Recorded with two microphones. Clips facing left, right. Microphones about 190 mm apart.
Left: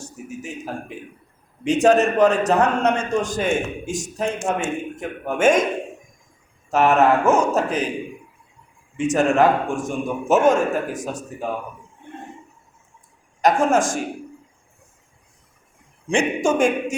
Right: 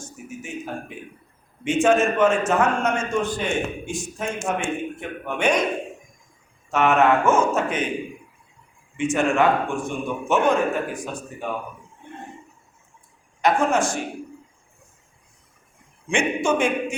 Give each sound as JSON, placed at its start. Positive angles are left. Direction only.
{"t": 0.0, "sound": "a sound", "side_deg": 35}
{"t": 1.6, "sound": "a man's voice", "side_deg": 40}
{"t": 6.7, "sound": "a man's voice", "side_deg": 35}
{"t": 9.0, "sound": "a man's voice", "side_deg": 40}
{"t": 13.4, "sound": "a man's voice", "side_deg": 45}
{"t": 16.0, "sound": "a man's voice", "side_deg": 40}